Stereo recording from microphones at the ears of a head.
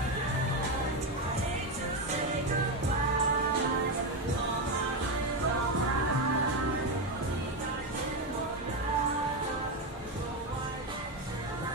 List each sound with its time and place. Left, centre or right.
3.0 s music: right